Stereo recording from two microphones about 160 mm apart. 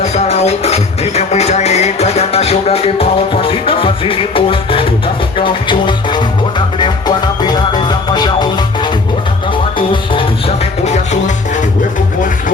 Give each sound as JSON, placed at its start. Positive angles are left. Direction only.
{"t": 0.0, "sound": "music", "side_deg": 40}
{"t": 7.4, "sound": "music", "side_deg": 25}
{"t": 10.8, "sound": "music", "side_deg": 45}